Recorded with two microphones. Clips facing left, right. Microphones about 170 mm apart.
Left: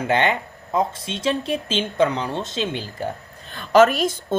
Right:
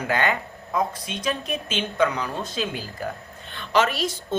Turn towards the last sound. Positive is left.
turn(degrees=50)  # may be behind; listen again after turning